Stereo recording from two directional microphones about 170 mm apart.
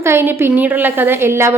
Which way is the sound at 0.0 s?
15° right (ahead or behind).